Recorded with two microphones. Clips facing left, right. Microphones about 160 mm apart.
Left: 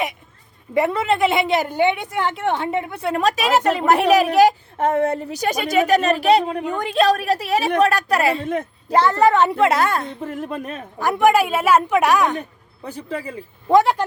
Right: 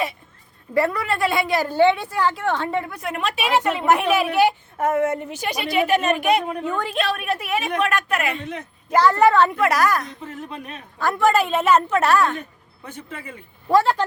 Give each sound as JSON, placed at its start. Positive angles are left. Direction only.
{"t": 0.7, "sound": "a woman's voice", "side_deg": 20}
{"t": 6.7, "sound": "a woman's voice", "side_deg": 15}
{"t": 6.9, "sound": "a woman's voice", "side_deg": 35}
{"t": 8.9, "sound": "a woman's voice", "side_deg": 25}
{"t": 10.2, "sound": "a woman's voice", "side_deg": 50}
{"t": 11.0, "sound": "a woman's voice", "side_deg": 15}
{"t": 12.8, "sound": "a woman's voice", "side_deg": 35}
{"t": 13.7, "sound": "a woman's voice", "side_deg": 15}